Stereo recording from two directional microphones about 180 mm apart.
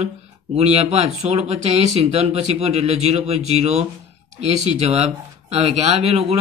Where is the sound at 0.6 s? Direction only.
35° right (ahead or behind).